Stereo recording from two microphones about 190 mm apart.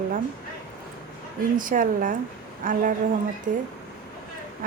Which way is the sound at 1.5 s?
45° right (ahead or behind).